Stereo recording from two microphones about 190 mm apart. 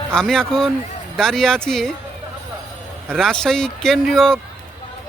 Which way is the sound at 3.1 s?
5° left (ahead or behind).